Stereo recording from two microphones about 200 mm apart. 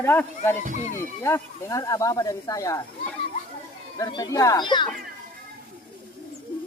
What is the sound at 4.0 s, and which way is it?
Speech, 20° left (ahead or behind).